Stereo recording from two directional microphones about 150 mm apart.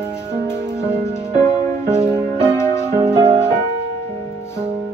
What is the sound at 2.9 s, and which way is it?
Music, 30° right (ahead or behind).